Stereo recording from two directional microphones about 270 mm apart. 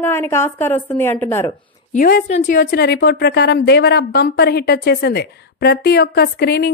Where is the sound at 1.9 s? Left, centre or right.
Left.